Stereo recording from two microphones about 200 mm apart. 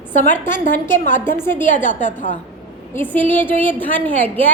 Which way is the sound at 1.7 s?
40° left (ahead or behind).